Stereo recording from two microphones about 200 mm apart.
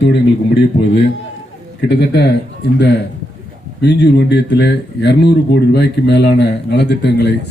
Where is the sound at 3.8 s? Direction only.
55° left (ahead or behind).